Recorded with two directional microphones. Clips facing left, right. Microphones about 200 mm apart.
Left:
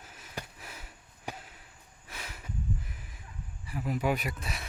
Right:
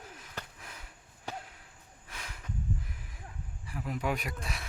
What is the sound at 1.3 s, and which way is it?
Basketball bounce, 15° left (ahead or behind).